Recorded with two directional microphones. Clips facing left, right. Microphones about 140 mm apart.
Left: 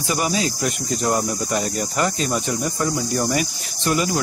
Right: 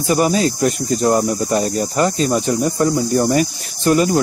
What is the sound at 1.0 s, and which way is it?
Speech, 30° right (ahead or behind).